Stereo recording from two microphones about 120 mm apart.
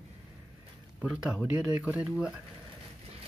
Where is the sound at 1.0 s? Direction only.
10° right (ahead or behind).